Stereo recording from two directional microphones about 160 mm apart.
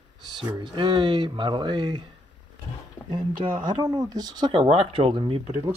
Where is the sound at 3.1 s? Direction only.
30° right (ahead or behind).